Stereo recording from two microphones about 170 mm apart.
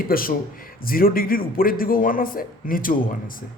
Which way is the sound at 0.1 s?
60° left (ahead or behind).